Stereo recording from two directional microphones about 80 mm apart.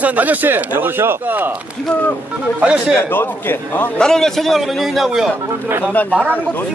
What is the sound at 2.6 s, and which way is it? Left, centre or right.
Speech, centre.